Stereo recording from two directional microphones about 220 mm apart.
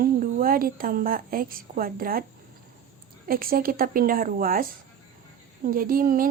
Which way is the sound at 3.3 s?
40° right (ahead or behind).